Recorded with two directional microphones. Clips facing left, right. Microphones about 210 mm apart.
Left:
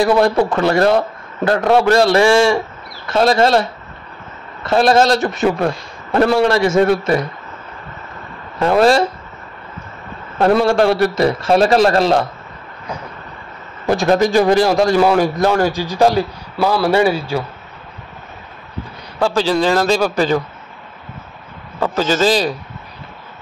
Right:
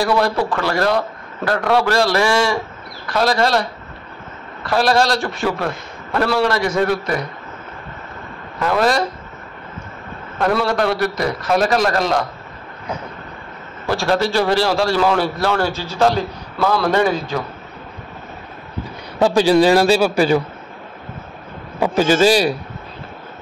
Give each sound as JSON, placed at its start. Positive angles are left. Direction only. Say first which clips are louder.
{"t": 0.0, "sound": "a man's voice", "louder": "left 4 dB", "side_deg": 25}
{"t": 8.5, "sound": "a man's voice", "louder": "left 5 dB", "side_deg": 30}
{"t": 10.4, "sound": "a man's voice", "louder": "left 5 dB", "side_deg": 25}
{"t": 13.8, "sound": "a man's voice", "louder": "left 4 dB", "side_deg": 20}
{"t": 19.1, "sound": "a man's voice", "louder": "right 3 dB", "side_deg": -15}
{"t": 21.7, "sound": "a man's voice", "louder": "right 2 dB", "side_deg": -15}